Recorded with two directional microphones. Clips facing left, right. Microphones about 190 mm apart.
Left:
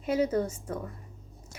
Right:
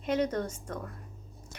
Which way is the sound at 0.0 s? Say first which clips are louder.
Left 3 dB; 5° left (ahead or behind).